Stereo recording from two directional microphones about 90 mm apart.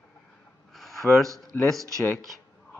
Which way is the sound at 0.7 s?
Centre (ahead or behind).